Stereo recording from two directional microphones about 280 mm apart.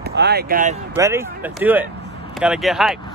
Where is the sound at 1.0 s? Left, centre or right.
Centre.